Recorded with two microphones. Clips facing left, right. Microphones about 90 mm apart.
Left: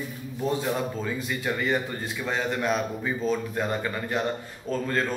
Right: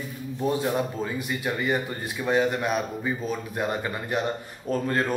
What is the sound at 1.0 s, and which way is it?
A man's voice, 15° right (ahead or behind).